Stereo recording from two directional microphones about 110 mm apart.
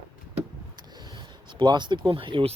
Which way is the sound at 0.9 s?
40° right (ahead or behind).